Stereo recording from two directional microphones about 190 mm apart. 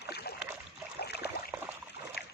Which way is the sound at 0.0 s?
55° left (ahead or behind).